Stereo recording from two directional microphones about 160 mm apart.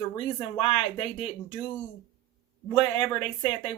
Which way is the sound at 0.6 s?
35° left (ahead or behind).